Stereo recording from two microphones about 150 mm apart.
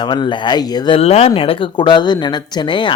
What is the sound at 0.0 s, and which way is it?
Speech, 30° left (ahead or behind).